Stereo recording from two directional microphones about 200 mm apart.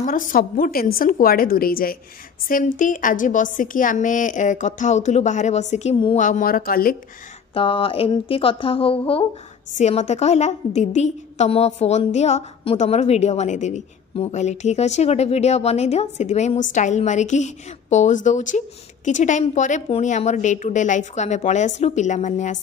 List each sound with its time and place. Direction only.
0.0 s a woman's voice: 45° left (ahead or behind)
7.5 s a woman's voice: 25° left (ahead or behind)